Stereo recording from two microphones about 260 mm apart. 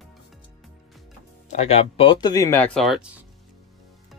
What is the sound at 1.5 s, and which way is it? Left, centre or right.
Speech, left.